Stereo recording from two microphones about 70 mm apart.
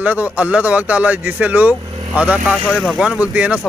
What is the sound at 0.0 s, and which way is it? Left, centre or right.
Speech, right.